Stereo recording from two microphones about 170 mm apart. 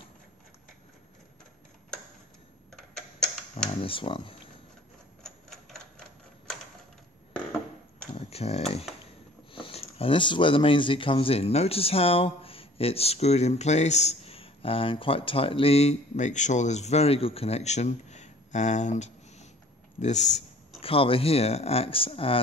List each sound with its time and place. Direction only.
2.7 s tick-tock: 5° left (ahead or behind)
3.8 s speech: 30° left (ahead or behind)
5.2 s typewriter: centre (ahead or behind)
8.3 s speech: 35° left (ahead or behind)